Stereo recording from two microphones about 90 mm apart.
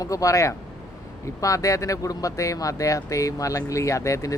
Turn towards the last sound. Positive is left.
turn(degrees=35)  # may be behind; listen again after turning